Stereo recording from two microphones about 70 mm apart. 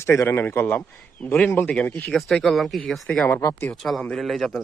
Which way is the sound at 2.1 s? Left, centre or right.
Centre.